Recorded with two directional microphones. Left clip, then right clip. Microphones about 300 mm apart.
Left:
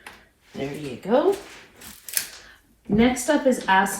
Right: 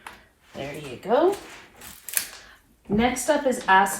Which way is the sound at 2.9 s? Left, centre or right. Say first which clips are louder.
Left 1 dB; right.